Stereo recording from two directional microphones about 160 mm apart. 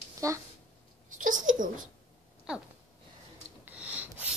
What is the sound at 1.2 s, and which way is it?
Babbling, 55° right (ahead or behind).